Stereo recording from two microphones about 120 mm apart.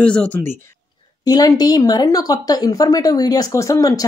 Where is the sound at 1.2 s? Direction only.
30° left (ahead or behind).